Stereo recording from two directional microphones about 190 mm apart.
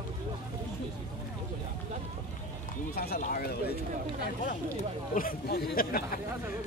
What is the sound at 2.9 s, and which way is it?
Speech, 55° left (ahead or behind).